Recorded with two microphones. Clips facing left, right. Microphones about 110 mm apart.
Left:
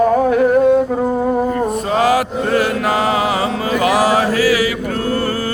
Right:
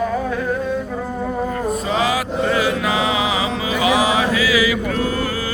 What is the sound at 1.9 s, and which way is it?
Mantra, 55° left (ahead or behind).